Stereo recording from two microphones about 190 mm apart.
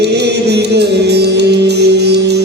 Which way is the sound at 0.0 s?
60° right (ahead or behind).